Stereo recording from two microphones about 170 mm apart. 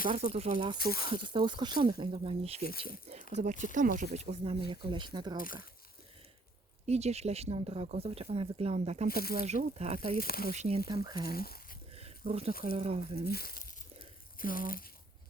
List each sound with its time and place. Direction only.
0.1 s speech: 40° right (ahead or behind)
3.3 s speech: 50° right (ahead or behind)
4.7 s speech: 30° right (ahead or behind)
6.8 s speech: 40° right (ahead or behind)
9.0 s speech: 60° left (ahead or behind)
9.4 s speech: 40° right (ahead or behind)
10.2 s speech: 60° left (ahead or behind)
10.5 s speech: 40° right (ahead or behind)
10.8 s speech: 25° right (ahead or behind)
11.3 s speech: 60° left (ahead or behind)
11.9 s a sound: 35° right (ahead or behind)
12.7 s speech: 35° right (ahead or behind)
13.2 s speech: 65° left (ahead or behind)